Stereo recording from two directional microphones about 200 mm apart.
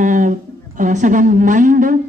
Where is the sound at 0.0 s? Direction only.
40° right (ahead or behind).